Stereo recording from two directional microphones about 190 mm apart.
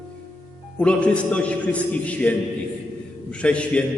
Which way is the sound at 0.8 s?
5° left (ahead or behind).